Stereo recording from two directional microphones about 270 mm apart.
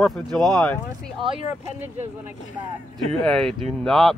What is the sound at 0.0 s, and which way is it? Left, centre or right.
Speech, centre.